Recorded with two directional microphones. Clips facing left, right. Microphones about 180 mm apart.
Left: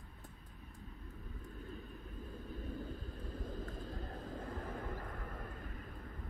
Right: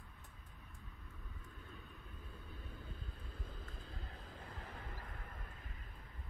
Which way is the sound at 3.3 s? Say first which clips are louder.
Left 10 dB; 45° left (ahead or behind).